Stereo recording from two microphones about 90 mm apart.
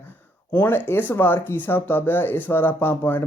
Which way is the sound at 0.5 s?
25° left (ahead or behind).